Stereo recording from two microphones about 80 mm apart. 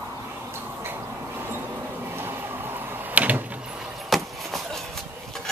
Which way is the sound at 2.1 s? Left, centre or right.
Right.